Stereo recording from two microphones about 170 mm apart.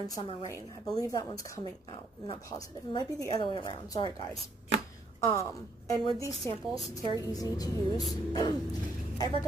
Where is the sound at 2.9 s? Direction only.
25° left (ahead or behind).